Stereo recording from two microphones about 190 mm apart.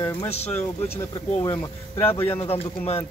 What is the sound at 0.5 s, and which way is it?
Speech, 10° left (ahead or behind).